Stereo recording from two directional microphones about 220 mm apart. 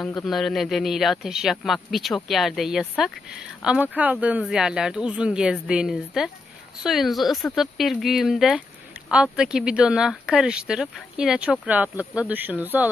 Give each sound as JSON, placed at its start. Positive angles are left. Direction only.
{"t": 0.0, "sound": "speech", "side_deg": 0}